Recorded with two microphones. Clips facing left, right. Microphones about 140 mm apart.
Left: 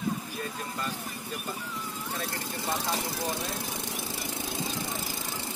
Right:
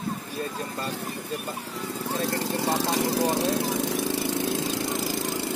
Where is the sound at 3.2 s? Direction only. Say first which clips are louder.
Right 10 dB; 80° right.